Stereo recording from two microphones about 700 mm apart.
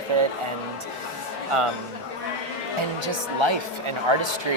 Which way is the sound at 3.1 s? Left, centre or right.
Right.